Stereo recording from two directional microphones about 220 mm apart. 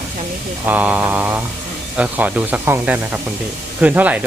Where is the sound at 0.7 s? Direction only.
5° right (ahead or behind).